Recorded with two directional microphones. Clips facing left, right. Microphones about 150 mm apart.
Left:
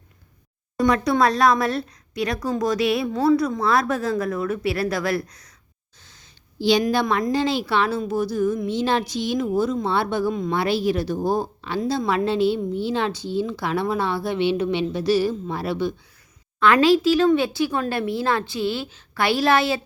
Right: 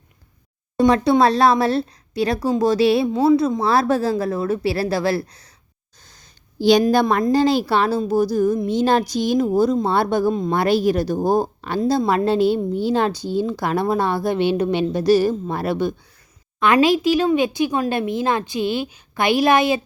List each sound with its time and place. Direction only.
0.8 s a woman's voice: 30° right (ahead or behind)
6.0 s a sound: 40° right (ahead or behind)
6.9 s a woman's voice: 45° right (ahead or behind)
16.6 s speech: 20° right (ahead or behind)